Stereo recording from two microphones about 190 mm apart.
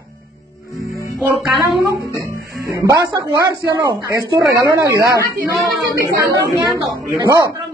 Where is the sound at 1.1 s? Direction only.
Centre (ahead or behind).